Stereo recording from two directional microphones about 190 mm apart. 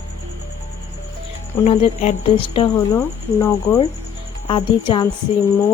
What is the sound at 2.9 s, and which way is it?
Speech, 15° left (ahead or behind).